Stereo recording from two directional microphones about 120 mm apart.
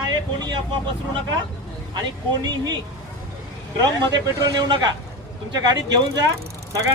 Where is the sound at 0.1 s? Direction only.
35° right (ahead or behind).